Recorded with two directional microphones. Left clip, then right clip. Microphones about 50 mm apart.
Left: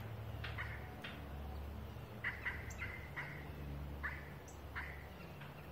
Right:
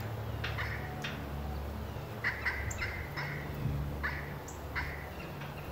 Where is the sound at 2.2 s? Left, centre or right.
Centre.